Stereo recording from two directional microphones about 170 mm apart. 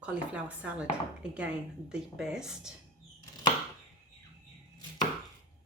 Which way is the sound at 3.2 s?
20° left (ahead or behind).